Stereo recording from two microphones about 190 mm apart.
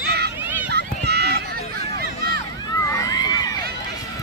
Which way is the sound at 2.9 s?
20° left (ahead or behind).